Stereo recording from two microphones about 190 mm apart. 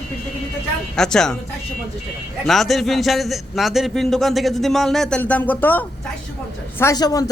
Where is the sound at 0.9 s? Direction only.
5° left (ahead or behind).